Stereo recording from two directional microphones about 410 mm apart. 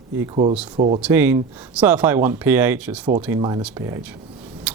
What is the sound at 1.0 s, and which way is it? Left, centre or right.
Speech, centre.